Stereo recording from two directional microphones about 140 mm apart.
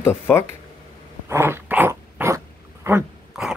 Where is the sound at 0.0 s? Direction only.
15° left (ahead or behind).